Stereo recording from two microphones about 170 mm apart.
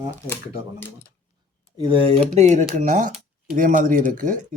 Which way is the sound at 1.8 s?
30° right (ahead or behind).